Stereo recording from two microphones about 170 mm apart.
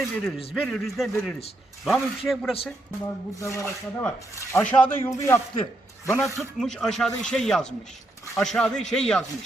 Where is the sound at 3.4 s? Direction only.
15° left (ahead or behind).